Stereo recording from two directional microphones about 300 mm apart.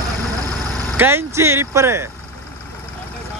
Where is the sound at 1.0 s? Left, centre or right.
Centre.